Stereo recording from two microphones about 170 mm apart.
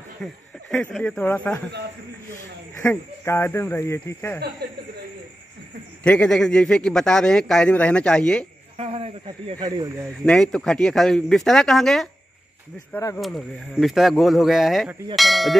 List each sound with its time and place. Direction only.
0.2 s speech: 5° left (ahead or behind)
2.8 s speech: 15° left (ahead or behind)
4.6 s speech: 75° right (ahead or behind)
6.0 s speech: 5° left (ahead or behind)
8.7 s a sound: 35° right (ahead or behind)
9.6 s speech: 25° right (ahead or behind)
10.2 s speech: 5° left (ahead or behind)